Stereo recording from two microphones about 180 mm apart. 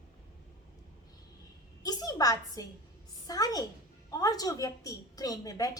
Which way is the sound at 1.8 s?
20° left (ahead or behind).